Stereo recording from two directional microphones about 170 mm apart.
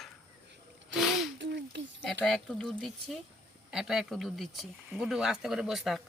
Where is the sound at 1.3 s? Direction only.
90° right.